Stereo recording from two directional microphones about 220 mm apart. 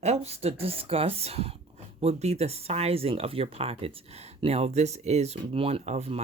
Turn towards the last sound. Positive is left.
turn(degrees=-30)  # may be behind; listen again after turning